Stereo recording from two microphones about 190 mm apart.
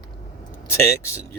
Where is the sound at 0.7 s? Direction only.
15° left (ahead or behind).